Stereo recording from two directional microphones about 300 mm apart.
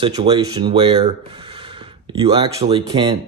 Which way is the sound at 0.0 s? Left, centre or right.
Centre.